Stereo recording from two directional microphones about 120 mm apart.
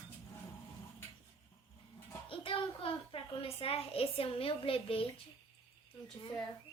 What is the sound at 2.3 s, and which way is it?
A child's voice, 45° left (ahead or behind).